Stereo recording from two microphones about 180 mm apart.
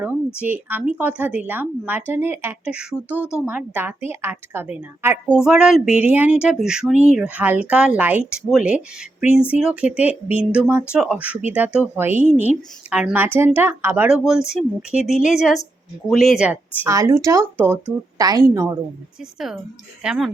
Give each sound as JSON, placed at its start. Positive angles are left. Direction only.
{"t": 0.3, "sound": "speech", "side_deg": -10}
{"t": 3.2, "sound": "speech", "side_deg": 15}
{"t": 3.4, "sound": "a woman's voice", "side_deg": -10}
{"t": 19.2, "sound": "speech", "side_deg": 0}